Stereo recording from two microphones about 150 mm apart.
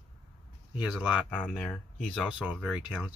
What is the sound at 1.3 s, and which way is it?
Speech, 10° left (ahead or behind).